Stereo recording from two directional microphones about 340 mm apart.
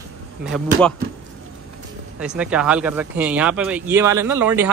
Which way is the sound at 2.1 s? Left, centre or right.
Centre.